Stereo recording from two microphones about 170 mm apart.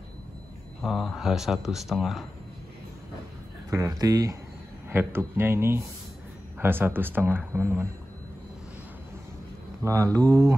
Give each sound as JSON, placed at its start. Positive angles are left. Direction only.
{"t": 0.8, "sound": "speech", "side_deg": 0}
{"t": 3.7, "sound": "speech", "side_deg": -20}
{"t": 9.8, "sound": "speech", "side_deg": -15}